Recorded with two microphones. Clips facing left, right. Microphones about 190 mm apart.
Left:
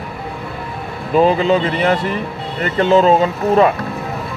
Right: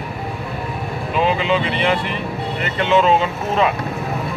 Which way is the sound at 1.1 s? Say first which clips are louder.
Left 6 dB; 40° left (ahead or behind).